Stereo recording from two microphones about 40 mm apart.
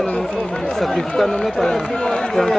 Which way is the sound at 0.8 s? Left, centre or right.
Centre.